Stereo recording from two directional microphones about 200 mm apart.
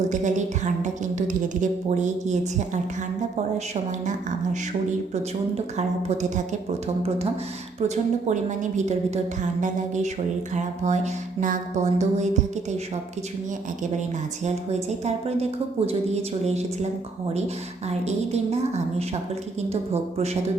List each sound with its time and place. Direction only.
0.1 s a sound: 35° right (ahead or behind)
1.3 s a woman's voice: 40° right (ahead or behind)
5.7 s a woman's voice: 35° right (ahead or behind)
14.4 s a woman's voice: 35° right (ahead or behind)